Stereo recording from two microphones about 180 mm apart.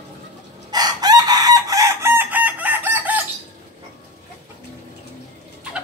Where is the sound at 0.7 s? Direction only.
20° right (ahead or behind).